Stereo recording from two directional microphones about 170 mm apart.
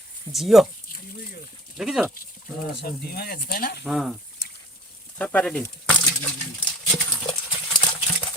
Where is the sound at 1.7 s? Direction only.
5° right (ahead or behind).